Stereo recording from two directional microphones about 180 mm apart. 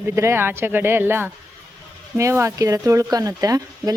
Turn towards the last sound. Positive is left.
turn(degrees=-20)  # may be behind; listen again after turning